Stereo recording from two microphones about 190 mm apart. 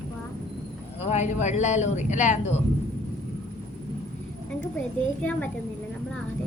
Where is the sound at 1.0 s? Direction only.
35° left (ahead or behind).